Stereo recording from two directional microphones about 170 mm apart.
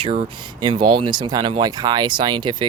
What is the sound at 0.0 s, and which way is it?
Speech, 35° right (ahead or behind).